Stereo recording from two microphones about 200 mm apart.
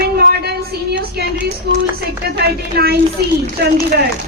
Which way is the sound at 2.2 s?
55° right (ahead or behind).